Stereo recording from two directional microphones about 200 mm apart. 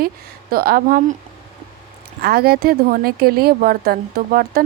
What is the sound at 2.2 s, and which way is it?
A woman's voice, 50° right (ahead or behind).